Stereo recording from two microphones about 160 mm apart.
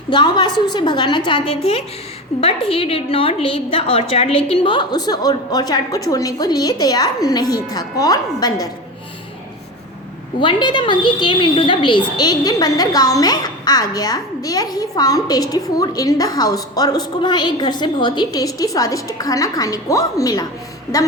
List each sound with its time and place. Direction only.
0.1 s a woman's voice: 30° left (ahead or behind)
10.4 s a woman's voice: 30° left (ahead or behind)